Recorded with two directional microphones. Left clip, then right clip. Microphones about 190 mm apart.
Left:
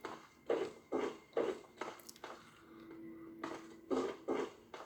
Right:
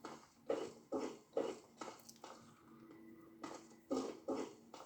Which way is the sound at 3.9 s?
Centre (ahead or behind).